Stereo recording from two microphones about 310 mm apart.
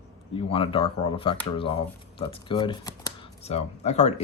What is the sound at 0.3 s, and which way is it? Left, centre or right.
Speech, centre.